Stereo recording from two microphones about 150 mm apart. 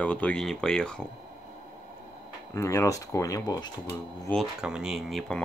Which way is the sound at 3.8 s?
10° left (ahead or behind).